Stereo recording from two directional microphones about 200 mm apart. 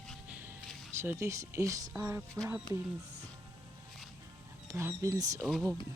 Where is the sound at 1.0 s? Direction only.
15° right (ahead or behind).